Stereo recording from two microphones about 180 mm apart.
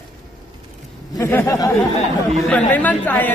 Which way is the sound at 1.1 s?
15° left (ahead or behind).